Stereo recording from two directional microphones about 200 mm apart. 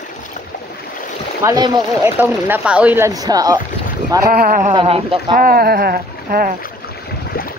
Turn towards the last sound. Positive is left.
turn(degrees=-45)  # may be behind; listen again after turning